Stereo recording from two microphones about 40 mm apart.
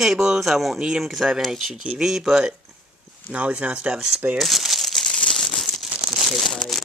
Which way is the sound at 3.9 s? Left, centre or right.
Centre.